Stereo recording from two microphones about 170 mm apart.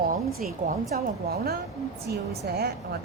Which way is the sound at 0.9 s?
65° right (ahead or behind).